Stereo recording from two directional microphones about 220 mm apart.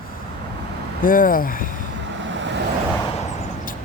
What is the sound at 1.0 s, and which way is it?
Speech, 40° left (ahead or behind).